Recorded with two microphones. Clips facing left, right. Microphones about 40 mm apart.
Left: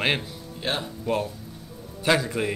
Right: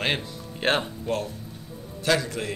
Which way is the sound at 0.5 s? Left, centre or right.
Right.